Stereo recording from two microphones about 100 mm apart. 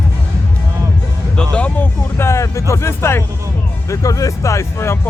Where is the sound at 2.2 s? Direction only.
30° left (ahead or behind).